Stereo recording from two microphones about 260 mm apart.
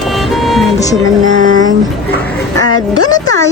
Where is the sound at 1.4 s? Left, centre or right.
Right.